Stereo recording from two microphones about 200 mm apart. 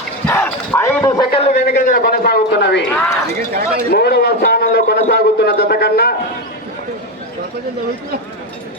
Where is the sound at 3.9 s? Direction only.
55° left (ahead or behind).